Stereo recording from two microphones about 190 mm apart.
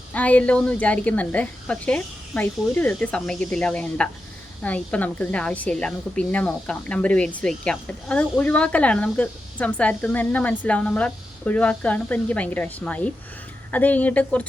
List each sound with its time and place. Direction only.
0.1 s speech: 10° left (ahead or behind)